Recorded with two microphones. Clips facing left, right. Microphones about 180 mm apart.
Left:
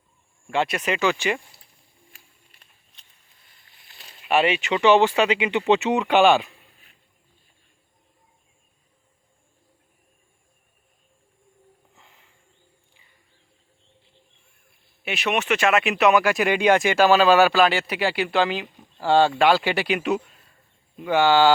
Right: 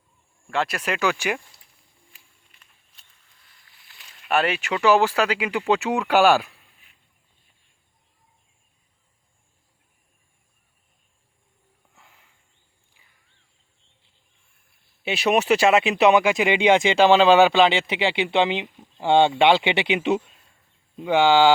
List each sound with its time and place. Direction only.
0.5 s speech: centre (ahead or behind)
2.1 s walk: 35° left (ahead or behind)
4.2 s speech: centre (ahead or behind)
15.0 s speech: 35° right (ahead or behind); by 21.5 s 15° right (ahead or behind)